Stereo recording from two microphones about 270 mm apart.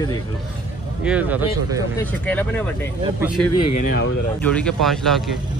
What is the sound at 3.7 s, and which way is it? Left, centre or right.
Speech, left.